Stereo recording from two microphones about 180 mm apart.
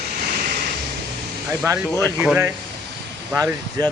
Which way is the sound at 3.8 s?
20° right (ahead or behind).